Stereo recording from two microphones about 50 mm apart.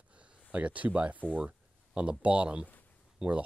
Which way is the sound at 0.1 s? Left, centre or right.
Right.